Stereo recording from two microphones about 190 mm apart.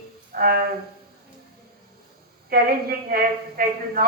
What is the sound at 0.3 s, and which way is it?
Speech, 55° right (ahead or behind).